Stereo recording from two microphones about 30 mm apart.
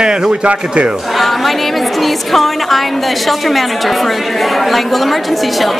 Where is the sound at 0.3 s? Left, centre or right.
Right.